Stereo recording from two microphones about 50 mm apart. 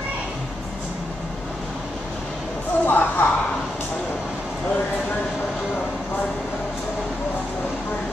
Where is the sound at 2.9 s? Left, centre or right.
Left.